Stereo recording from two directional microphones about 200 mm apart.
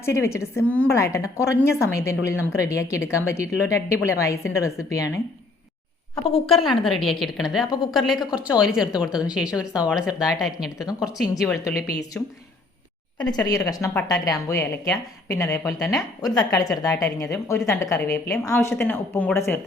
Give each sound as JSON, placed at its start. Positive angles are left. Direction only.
{"t": 0.0, "sound": "a woman's voice", "side_deg": 15}
{"t": 6.5, "sound": "a woman's voice", "side_deg": 0}
{"t": 11.6, "sound": "a woman's voice", "side_deg": 15}